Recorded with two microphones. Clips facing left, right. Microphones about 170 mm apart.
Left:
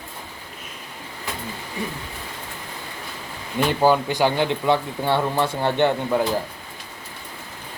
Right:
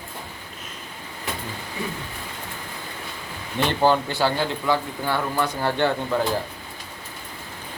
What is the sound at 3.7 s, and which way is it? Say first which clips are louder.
Speech: left 2 dB; 10° left (ahead or behind).